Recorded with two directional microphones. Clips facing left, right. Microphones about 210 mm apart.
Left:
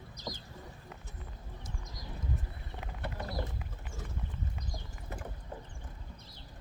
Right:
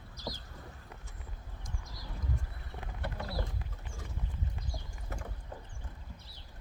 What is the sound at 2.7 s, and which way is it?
Clip-clop, 20° left (ahead or behind).